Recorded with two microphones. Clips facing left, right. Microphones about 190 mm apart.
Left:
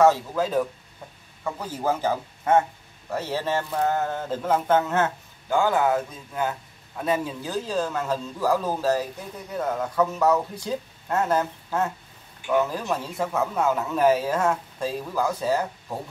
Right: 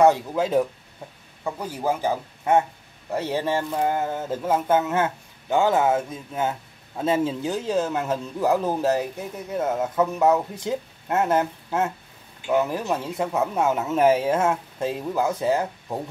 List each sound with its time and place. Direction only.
0.0 s speech: 20° right (ahead or behind)